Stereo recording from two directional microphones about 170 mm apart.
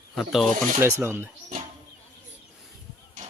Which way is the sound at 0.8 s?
15° right (ahead or behind).